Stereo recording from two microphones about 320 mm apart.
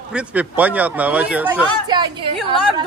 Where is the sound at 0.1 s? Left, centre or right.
Centre.